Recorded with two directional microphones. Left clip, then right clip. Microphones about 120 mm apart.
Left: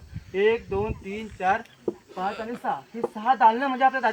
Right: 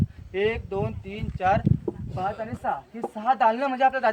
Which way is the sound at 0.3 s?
30° right (ahead or behind).